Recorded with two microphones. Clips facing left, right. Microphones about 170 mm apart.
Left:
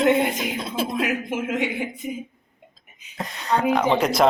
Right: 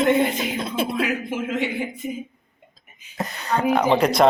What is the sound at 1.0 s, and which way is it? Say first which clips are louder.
Speech: even; 15° left (ahead or behind).